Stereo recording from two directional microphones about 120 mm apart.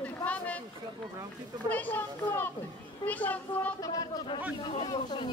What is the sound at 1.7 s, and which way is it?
Speech, 15° left (ahead or behind).